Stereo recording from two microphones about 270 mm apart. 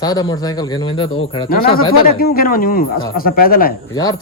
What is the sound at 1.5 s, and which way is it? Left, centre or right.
A man's voice, left.